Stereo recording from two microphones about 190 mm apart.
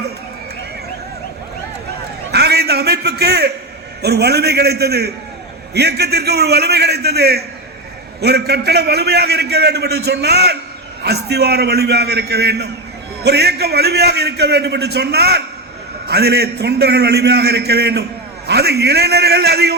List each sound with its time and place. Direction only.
2.3 s a man's voice: 60° right (ahead or behind)